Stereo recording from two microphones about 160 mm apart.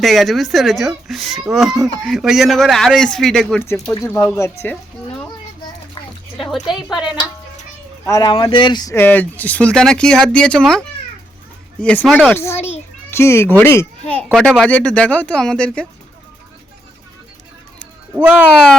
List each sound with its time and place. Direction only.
0.0 s speech: centre (ahead or behind)
3.6 s speech: 15° left (ahead or behind)
4.6 s music: 10° left (ahead or behind)
6.3 s a sound: centre (ahead or behind)
6.9 s speech: 5° right (ahead or behind)
8.0 s speech: 25° left (ahead or behind)
9.0 s a child's voice: 10° left (ahead or behind)
14.3 s speech: centre (ahead or behind)
18.1 s speech: 10° right (ahead or behind)